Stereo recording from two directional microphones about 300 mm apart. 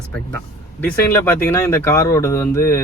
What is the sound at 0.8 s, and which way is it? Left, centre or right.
Speech, centre.